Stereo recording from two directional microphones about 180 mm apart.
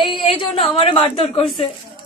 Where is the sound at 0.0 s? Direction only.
25° left (ahead or behind).